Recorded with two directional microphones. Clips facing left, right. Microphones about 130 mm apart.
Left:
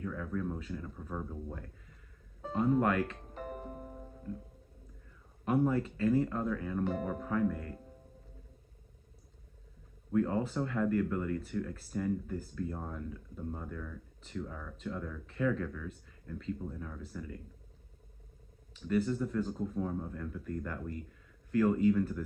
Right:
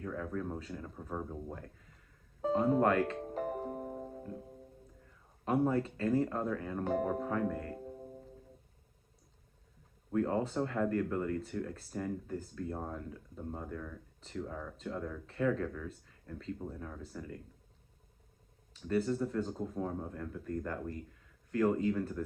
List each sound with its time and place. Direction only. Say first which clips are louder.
0.0 s speech: left 1 dB; 35° right (ahead or behind)
5.5 s speech: left 1 dB; 30° right (ahead or behind)
10.1 s speech: left 1 dB; 35° right (ahead or behind)
18.7 s speech: left 1 dB; 35° right (ahead or behind)
21.5 s speech: left 3 dB; 30° right (ahead or behind)